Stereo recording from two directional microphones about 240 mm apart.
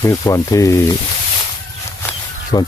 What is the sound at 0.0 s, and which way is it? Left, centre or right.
Speech, centre.